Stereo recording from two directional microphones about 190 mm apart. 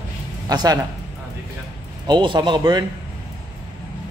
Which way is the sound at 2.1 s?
25° right (ahead or behind).